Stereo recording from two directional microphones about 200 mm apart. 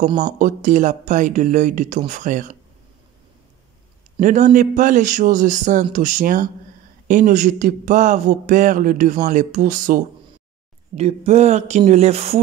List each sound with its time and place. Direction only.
0.4 s a man's voice: 40° right (ahead or behind)
4.2 s a man's voice: 40° right (ahead or behind)
11.0 s a man's voice: 30° right (ahead or behind)